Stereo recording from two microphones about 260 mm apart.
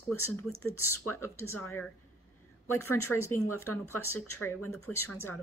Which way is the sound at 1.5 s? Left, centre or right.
Left.